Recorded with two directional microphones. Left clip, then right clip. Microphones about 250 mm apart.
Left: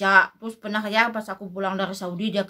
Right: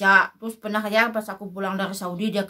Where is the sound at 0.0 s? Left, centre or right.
Centre.